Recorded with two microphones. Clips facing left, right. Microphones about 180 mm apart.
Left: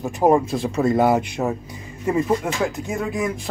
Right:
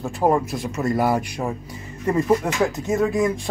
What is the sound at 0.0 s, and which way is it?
Speech, 20° left (ahead or behind).